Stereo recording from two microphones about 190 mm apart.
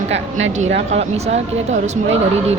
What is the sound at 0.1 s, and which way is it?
Speech, 85° right.